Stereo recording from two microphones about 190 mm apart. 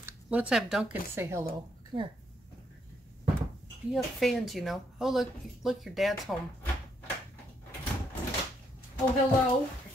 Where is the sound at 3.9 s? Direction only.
Centre (ahead or behind).